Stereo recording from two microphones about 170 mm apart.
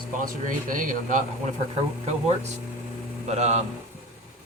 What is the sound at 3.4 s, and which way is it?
Speech, 40° right (ahead or behind).